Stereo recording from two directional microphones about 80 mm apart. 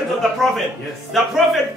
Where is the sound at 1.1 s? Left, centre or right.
Centre.